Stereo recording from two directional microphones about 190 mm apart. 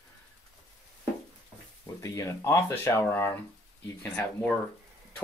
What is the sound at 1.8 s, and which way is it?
Speech, 15° left (ahead or behind).